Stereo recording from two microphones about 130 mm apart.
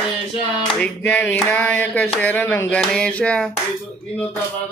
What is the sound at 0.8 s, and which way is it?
Speech, 15° left (ahead or behind).